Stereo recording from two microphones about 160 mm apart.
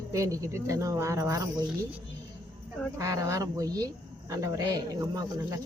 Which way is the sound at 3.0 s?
20° right (ahead or behind).